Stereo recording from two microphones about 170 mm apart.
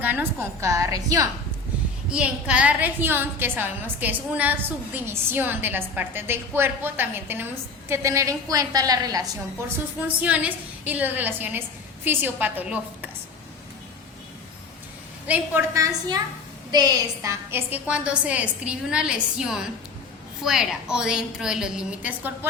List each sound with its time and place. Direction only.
0.0 s a woman's voice: 10° right (ahead or behind)
2.0 s a woman's voice: 5° right (ahead or behind); by 9.2 s 20° right (ahead or behind)
10.2 s a woman's voice: 10° right (ahead or behind)
15.3 s a woman's voice: 15° right (ahead or behind)